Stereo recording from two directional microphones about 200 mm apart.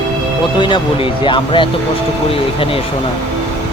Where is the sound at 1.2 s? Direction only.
25° left (ahead or behind).